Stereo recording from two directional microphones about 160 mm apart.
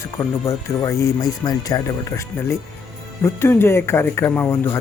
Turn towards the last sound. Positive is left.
turn(degrees=15)  # may be behind; listen again after turning